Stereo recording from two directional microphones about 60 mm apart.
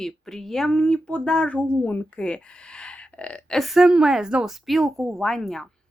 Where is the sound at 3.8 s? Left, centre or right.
Centre.